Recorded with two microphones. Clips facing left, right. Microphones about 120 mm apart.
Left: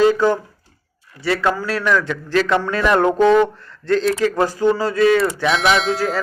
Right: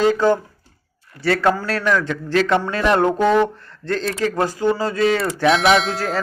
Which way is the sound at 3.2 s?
10° right (ahead or behind).